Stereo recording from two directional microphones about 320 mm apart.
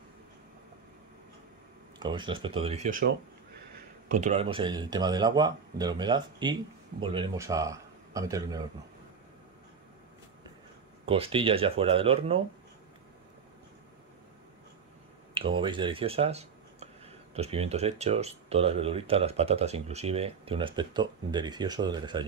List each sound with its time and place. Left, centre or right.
2.0 s speech: centre
11.1 s speech: centre
15.3 s speech: centre